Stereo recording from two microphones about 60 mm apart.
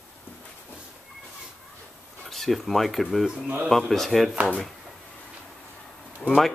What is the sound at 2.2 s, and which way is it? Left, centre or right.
Speech, centre.